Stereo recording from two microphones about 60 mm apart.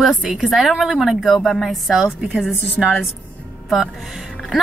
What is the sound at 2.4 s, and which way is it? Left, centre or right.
Speech, left.